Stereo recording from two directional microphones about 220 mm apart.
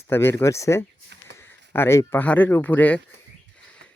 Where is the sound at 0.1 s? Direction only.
10° left (ahead or behind).